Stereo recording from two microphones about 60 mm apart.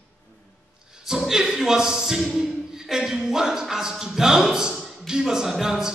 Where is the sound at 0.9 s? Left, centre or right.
Centre.